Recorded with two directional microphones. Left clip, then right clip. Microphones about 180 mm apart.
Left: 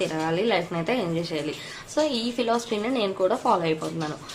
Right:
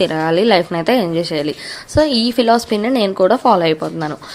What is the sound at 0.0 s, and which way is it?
A woman's voice, 45° right (ahead or behind).